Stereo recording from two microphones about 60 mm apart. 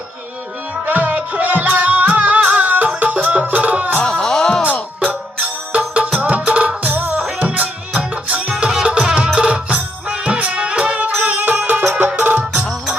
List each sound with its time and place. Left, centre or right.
0.9 s music: right
4.0 s music: centre
5.7 s music: right